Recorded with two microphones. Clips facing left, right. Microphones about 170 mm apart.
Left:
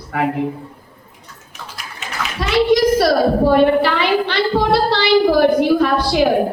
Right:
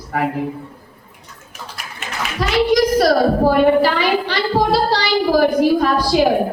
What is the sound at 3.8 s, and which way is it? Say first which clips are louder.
A man's voice: even; 60° left (ahead or behind).